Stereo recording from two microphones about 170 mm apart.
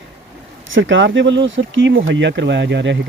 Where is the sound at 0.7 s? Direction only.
90° right.